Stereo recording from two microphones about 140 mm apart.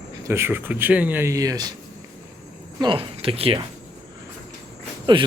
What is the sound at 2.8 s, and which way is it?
Speech, 35° right (ahead or behind).